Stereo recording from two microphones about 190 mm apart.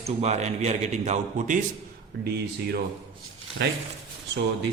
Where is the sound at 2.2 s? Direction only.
55° right (ahead or behind).